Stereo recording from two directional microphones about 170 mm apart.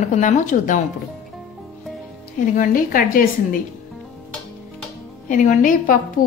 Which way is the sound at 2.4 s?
55° left (ahead or behind).